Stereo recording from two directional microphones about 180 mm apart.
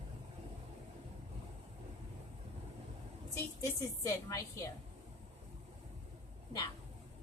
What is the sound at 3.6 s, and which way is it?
Speech, 20° left (ahead or behind).